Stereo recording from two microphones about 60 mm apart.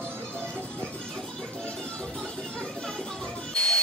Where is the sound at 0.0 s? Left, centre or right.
Right.